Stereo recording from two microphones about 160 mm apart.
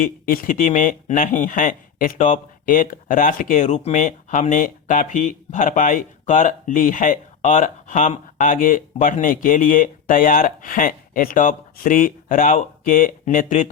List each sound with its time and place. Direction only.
0.0 s speech: 60° left (ahead or behind)